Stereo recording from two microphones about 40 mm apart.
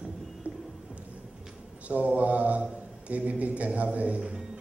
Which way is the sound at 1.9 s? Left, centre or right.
Right.